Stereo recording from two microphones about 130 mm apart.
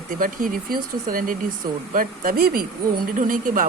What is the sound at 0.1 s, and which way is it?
A man's voice, 90° right.